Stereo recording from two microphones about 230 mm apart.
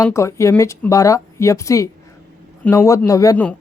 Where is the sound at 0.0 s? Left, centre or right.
Centre.